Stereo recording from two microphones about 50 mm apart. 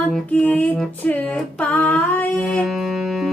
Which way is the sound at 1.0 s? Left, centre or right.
Left.